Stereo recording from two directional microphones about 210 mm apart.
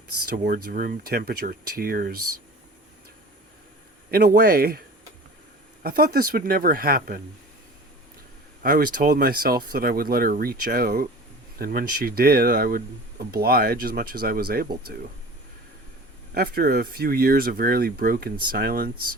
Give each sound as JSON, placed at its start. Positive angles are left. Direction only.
{"t": 0.3, "sound": "speech", "side_deg": -45}
{"t": 2.1, "sound": "speech", "side_deg": -90}
{"t": 4.1, "sound": "speech", "side_deg": -45}
{"t": 5.8, "sound": "speech", "side_deg": -45}
{"t": 8.6, "sound": "speech", "side_deg": -45}
{"t": 16.3, "sound": "speech", "side_deg": -45}